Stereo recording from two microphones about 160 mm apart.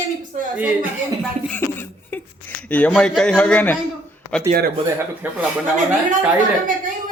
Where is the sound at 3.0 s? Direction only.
5° left (ahead or behind).